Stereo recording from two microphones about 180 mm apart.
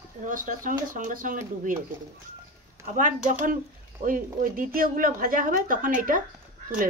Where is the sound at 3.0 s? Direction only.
45° right (ahead or behind).